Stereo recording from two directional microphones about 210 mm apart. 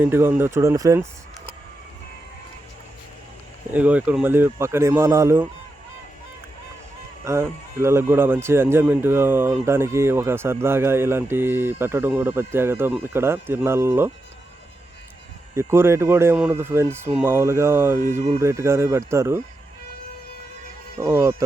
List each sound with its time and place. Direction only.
0.0 s speech: 10° right (ahead or behind)
3.7 s speech: 5° right (ahead or behind)
7.3 s speech: 15° right (ahead or behind)
15.5 s speech: 10° right (ahead or behind)
18.1 s speech: 30° right (ahead or behind)
18.3 s speech: 15° right (ahead or behind)
21.0 s speech: 15° right (ahead or behind)